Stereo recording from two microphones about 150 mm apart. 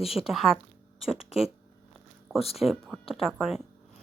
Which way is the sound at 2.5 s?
Centre (ahead or behind).